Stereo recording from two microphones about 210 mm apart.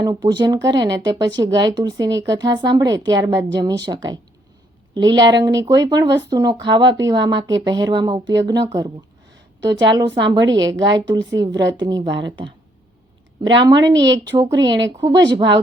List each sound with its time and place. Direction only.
0.0 s speech: 20° right (ahead or behind)
13.6 s speech: 20° right (ahead or behind)
14.7 s speech: 60° right (ahead or behind)
15.0 s speech: 20° right (ahead or behind)